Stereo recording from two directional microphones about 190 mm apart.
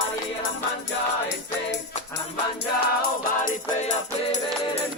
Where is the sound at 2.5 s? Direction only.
50° left (ahead or behind).